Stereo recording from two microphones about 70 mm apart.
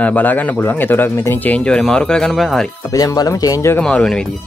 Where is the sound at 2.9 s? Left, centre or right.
Left.